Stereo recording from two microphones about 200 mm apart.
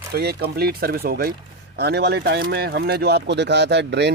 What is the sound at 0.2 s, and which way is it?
Speech, 55° right (ahead or behind).